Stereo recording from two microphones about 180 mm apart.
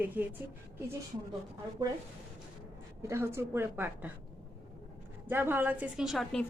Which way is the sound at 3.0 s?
15° right (ahead or behind).